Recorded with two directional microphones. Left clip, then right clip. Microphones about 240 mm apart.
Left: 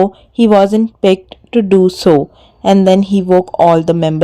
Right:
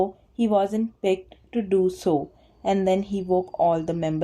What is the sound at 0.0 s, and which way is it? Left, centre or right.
A woman's voice, left.